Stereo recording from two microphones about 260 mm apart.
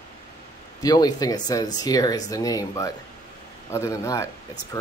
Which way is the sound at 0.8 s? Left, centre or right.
Centre.